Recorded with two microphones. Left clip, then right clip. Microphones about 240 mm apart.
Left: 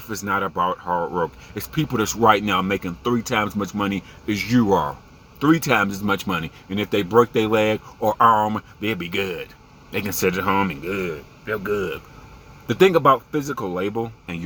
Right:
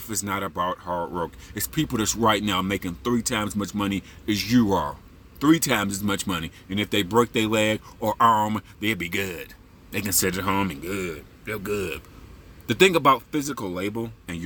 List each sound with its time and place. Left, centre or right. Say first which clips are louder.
0.3 s speech: left 6 dB; right